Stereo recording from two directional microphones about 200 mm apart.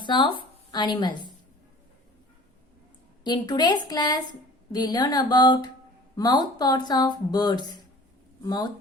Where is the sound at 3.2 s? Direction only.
20° left (ahead or behind).